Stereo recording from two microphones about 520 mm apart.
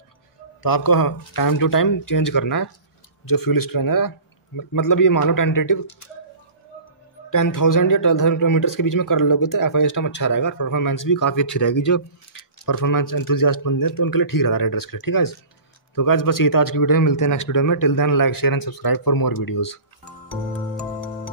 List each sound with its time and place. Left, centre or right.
0.6 s speech: left
7.2 s speech: left